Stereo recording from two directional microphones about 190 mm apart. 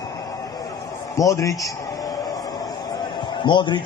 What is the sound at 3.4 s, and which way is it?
Speech, 25° left (ahead or behind).